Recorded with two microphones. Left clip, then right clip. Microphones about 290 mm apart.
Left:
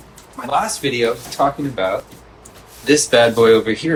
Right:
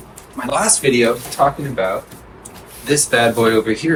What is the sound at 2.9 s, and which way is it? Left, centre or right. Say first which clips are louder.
Speech: left 2 dB; centre.